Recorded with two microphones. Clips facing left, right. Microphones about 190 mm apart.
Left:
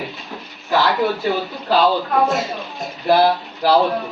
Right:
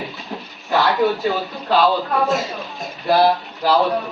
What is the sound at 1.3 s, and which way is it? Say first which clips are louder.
Speech: left 1 dB; 20° left (ahead or behind).